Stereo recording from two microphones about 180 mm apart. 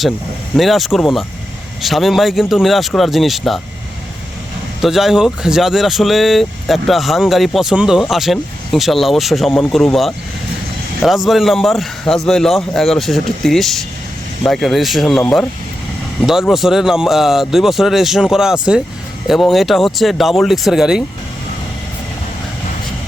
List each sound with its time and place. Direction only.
0.5 s speech: centre (ahead or behind)
4.8 s speech: centre (ahead or behind)